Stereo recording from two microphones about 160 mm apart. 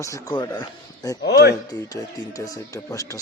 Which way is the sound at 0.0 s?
20° left (ahead or behind).